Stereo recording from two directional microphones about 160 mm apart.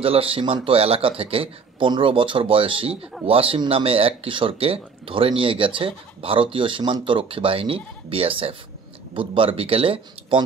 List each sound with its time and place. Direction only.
0.0 s speech: 35° right (ahead or behind)